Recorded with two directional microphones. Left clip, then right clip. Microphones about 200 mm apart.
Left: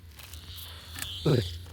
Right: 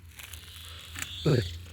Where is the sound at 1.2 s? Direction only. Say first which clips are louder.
Even; 10° right (ahead or behind).